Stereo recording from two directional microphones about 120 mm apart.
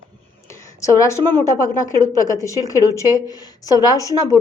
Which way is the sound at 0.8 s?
25° left (ahead or behind).